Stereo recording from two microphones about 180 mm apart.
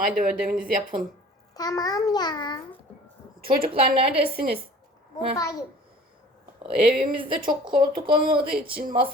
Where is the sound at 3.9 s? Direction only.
30° right (ahead or behind).